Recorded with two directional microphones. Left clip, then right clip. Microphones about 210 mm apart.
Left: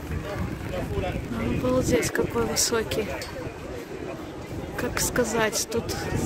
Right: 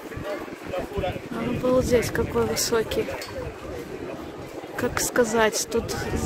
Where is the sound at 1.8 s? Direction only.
10° right (ahead or behind).